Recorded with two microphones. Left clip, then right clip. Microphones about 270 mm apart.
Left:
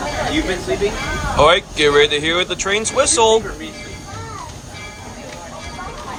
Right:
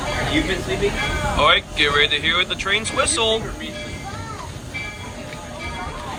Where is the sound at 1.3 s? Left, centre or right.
Centre.